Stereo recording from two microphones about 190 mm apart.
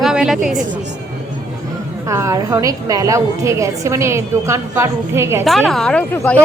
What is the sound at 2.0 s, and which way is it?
A woman's voice, 15° right (ahead or behind).